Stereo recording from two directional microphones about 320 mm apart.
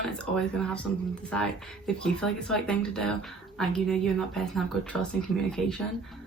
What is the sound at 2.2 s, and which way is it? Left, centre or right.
Speech, centre.